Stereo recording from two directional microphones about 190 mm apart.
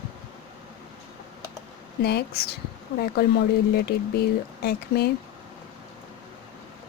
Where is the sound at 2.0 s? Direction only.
60° left (ahead or behind).